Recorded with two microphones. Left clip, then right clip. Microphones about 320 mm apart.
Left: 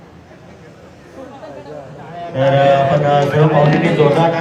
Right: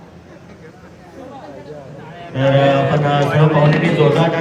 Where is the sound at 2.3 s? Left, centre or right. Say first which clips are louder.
Left 2 dB; left.